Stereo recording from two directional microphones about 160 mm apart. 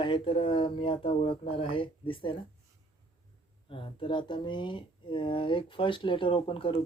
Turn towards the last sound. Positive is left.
turn(degrees=35)  # may be behind; listen again after turning